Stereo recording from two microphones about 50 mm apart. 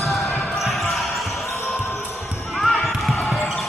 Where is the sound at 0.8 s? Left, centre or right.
Centre.